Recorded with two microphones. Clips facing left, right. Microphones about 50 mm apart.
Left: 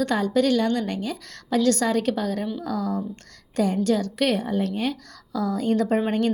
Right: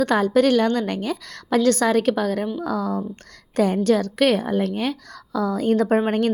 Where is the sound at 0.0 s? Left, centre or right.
Right.